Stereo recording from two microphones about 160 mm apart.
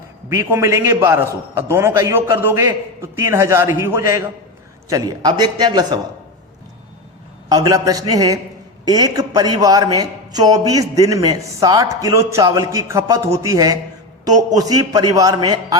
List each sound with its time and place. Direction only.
0.3 s a man's voice: 15° right (ahead or behind)
7.5 s a man's voice: 20° right (ahead or behind)